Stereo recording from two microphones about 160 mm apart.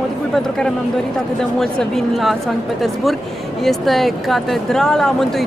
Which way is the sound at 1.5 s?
Centre (ahead or behind).